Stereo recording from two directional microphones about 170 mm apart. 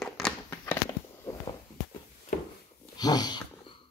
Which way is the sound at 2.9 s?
25° left (ahead or behind).